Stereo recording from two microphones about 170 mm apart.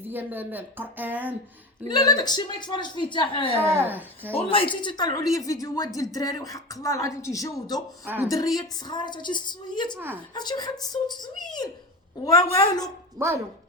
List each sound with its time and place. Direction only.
0.1 s speech: 10° right (ahead or behind)
1.9 s a woman's voice: 25° left (ahead or behind)
3.6 s speech: 15° right (ahead or behind)
4.4 s a woman's voice: 30° left (ahead or behind)
8.0 s speech: 10° right (ahead or behind)
8.3 s a woman's voice: 20° left (ahead or behind)
13.1 s speech: 15° right (ahead or behind)